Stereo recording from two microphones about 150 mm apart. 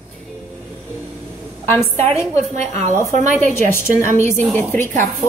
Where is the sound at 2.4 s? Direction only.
50° right (ahead or behind).